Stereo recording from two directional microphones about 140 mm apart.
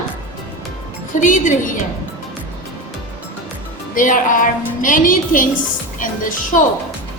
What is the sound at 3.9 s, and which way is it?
Speech, 70° left (ahead or behind).